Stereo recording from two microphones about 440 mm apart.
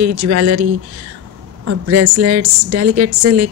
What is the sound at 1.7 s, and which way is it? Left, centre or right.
A woman's voice, right.